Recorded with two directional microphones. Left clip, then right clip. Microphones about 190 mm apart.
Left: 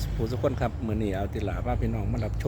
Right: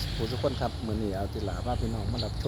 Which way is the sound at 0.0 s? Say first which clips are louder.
Left 1 dB; 40° left (ahead or behind).